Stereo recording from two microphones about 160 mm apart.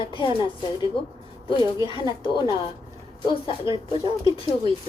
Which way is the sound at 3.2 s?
30° left (ahead or behind).